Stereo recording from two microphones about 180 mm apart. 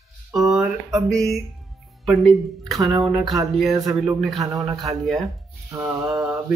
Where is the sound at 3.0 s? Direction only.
Centre (ahead or behind).